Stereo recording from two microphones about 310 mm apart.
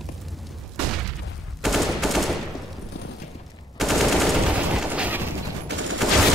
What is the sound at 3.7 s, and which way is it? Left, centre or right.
Machine gun, centre.